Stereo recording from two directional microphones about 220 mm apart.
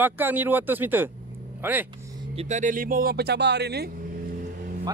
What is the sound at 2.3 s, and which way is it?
Speech, 35° right (ahead or behind).